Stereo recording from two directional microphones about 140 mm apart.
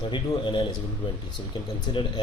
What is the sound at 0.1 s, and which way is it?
Speech, 35° left (ahead or behind).